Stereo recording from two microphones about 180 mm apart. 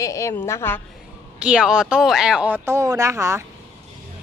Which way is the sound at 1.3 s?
5° right (ahead or behind).